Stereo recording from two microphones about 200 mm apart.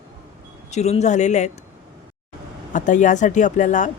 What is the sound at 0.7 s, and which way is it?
Speech, 35° left (ahead or behind).